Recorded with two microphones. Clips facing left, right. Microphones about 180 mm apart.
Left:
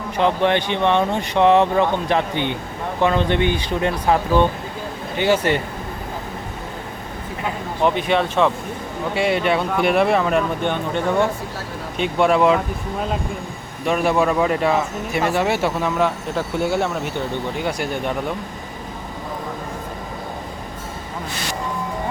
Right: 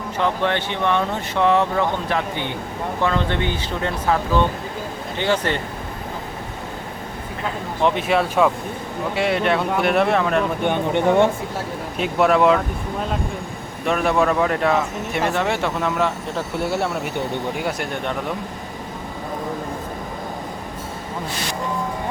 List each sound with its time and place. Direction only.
0.2 s speech: 20° left (ahead or behind)
7.8 s speech: centre (ahead or behind)
10.6 s speech: 15° right (ahead or behind)
11.9 s speech: 5° right (ahead or behind)
13.8 s speech: centre (ahead or behind)